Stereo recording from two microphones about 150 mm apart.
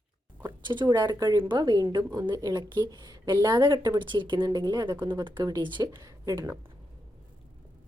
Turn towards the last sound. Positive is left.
turn(degrees=-20)  # may be behind; listen again after turning